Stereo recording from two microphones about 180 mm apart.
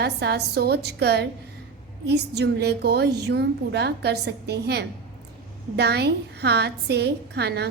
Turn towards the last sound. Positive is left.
turn(degrees=-65)  # may be behind; listen again after turning